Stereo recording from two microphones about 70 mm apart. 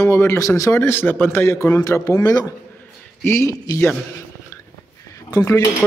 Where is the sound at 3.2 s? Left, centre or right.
Left.